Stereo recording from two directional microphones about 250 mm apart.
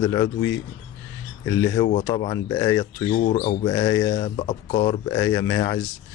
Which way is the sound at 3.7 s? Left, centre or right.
Centre.